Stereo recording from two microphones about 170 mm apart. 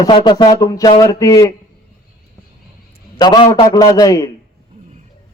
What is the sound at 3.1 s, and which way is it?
A man's voice, 25° left (ahead or behind).